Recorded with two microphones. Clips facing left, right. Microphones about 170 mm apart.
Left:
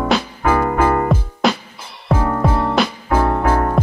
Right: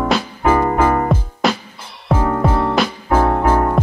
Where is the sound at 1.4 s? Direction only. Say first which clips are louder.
Left 1 dB; centre (ahead or behind).